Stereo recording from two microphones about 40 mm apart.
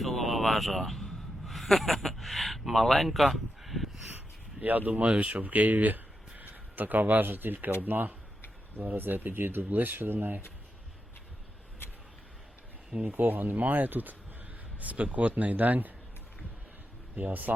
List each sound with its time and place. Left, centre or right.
0.0 s a man's voice: centre
4.6 s speech: right
13.0 s speech: right
14.8 s speech: right
17.2 s speech: right